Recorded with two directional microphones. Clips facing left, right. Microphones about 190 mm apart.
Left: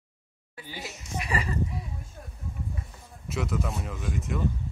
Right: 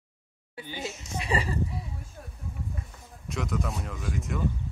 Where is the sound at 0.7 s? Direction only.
25° right (ahead or behind).